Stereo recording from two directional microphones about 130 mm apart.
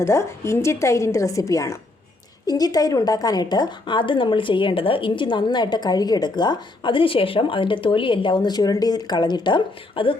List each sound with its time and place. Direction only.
0.0 s a woman's voice: 20° left (ahead or behind); by 10.2 s 40° left (ahead or behind)